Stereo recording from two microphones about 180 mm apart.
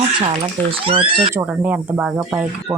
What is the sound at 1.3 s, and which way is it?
Speech, 10° right (ahead or behind).